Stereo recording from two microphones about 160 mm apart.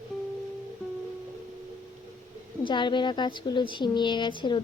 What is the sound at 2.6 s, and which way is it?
A woman's voice, 30° left (ahead or behind).